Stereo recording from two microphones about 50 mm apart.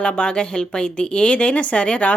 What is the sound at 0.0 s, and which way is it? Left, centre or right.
Speech, centre.